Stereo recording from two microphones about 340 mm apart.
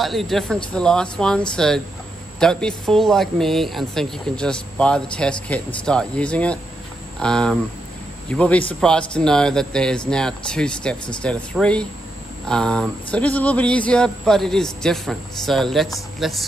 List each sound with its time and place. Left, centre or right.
0.0 s speech: centre